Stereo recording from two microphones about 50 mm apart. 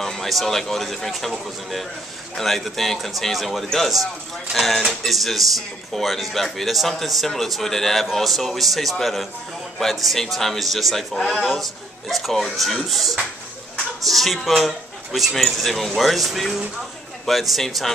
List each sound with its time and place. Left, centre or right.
0.0 s speech: centre
2.3 s a man's voice: centre